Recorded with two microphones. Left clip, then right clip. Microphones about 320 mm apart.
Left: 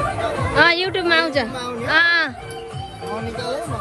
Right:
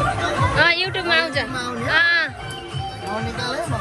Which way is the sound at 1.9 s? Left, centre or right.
Centre.